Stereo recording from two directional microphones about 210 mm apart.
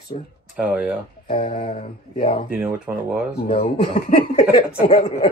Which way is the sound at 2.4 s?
10° right (ahead or behind).